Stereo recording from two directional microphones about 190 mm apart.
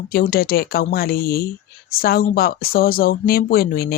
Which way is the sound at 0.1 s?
50° left (ahead or behind).